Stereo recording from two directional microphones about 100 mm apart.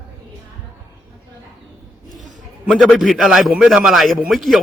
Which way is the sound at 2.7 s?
Centre (ahead or behind).